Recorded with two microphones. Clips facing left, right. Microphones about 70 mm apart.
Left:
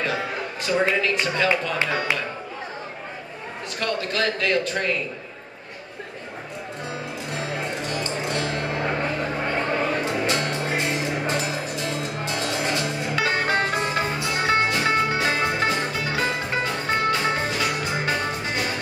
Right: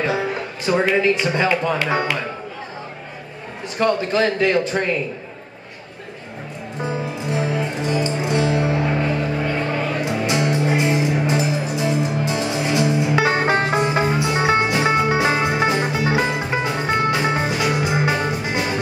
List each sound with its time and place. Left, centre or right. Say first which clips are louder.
0.7 s a man's voice: right 5 dB; right
3.7 s a man's voice: right 8 dB; right
6.8 s music: right 9 dB; centre
10.0 s music: right 4 dB; centre